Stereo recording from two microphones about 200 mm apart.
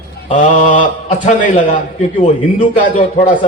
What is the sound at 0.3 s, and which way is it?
A man's voice, 40° left (ahead or behind).